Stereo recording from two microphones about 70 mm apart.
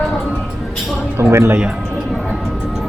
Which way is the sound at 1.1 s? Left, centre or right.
Right.